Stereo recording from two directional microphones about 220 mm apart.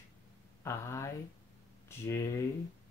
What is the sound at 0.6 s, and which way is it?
Speech, 10° left (ahead or behind).